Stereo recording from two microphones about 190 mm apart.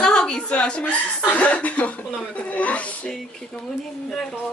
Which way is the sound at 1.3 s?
5° left (ahead or behind).